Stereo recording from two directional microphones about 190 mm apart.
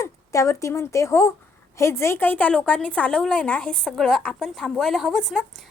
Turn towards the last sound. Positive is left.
turn(degrees=0)  # may be behind; listen again after turning